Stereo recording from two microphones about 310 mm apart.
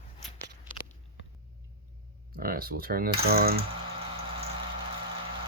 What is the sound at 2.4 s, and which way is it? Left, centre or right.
Typing, right.